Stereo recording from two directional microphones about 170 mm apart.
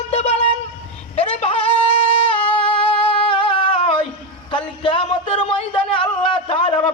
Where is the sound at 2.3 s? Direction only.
30° left (ahead or behind).